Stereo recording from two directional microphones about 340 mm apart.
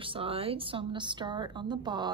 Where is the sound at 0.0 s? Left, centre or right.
Centre.